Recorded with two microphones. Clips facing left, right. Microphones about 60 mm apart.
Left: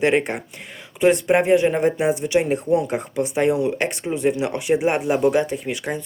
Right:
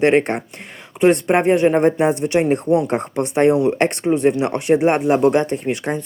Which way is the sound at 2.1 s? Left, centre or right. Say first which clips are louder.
Right 3 dB; right.